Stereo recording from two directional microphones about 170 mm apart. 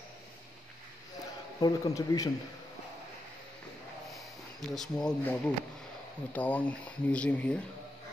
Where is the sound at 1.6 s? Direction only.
20° left (ahead or behind).